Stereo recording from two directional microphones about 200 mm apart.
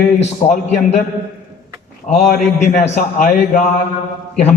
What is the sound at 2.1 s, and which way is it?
A man's voice, 35° left (ahead or behind).